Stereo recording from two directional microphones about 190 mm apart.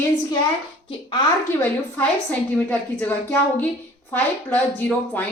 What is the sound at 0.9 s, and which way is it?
Speech, 20° left (ahead or behind).